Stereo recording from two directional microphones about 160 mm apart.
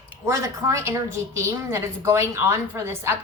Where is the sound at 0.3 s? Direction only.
20° right (ahead or behind).